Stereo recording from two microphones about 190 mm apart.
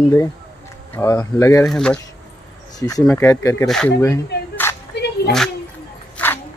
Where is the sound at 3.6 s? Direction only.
5° left (ahead or behind).